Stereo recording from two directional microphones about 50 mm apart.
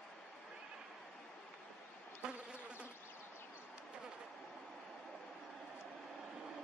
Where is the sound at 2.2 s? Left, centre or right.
Centre.